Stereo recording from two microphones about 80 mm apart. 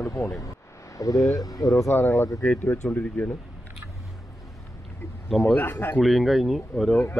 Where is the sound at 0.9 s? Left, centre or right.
Left.